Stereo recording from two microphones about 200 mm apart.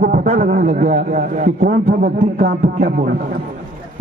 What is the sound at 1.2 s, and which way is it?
A man's voice, 45° right (ahead or behind).